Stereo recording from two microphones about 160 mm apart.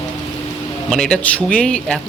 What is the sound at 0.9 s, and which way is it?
A man's voice, 5° left (ahead or behind).